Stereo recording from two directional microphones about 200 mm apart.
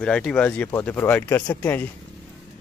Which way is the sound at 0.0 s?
5° left (ahead or behind).